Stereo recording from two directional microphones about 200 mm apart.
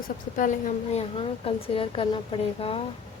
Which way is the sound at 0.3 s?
40° left (ahead or behind).